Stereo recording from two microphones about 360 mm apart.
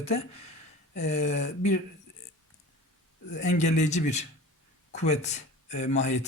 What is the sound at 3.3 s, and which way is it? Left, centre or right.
Speech, centre.